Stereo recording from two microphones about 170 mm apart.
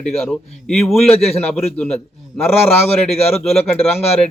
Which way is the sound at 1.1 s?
35° left (ahead or behind).